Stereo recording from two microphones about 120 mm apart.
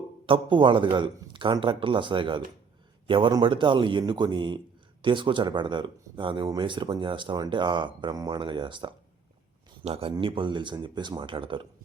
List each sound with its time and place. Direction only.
0.3 s a man's voice: 45° right (ahead or behind)
9.8 s a man's voice: 55° right (ahead or behind)